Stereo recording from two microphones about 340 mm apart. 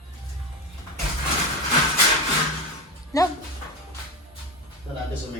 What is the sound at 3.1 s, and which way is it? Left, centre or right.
Speech, centre.